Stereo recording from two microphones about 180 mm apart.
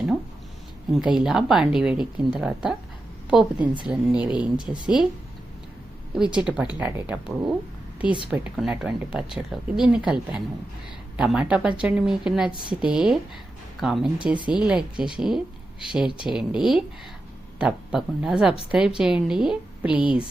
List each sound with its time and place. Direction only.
0.9 s speech: 5° right (ahead or behind)
6.3 s speech: 5° right (ahead or behind)